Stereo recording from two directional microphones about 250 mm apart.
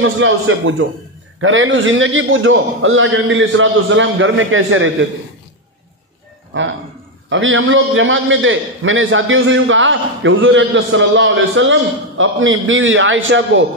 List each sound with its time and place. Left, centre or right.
0.0 s a man's voice: right
6.5 s a man's voice: right